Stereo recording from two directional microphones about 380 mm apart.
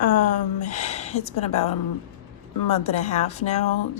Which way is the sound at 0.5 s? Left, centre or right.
Centre.